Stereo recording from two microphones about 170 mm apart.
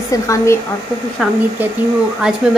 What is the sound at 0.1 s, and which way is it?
Speech, 20° left (ahead or behind).